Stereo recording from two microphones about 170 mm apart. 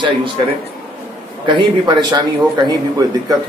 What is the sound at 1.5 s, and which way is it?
A man's voice, 25° right (ahead or behind).